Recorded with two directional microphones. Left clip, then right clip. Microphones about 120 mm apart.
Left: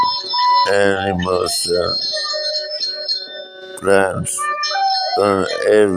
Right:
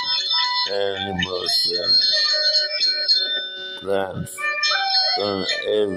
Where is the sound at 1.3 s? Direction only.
50° left (ahead or behind).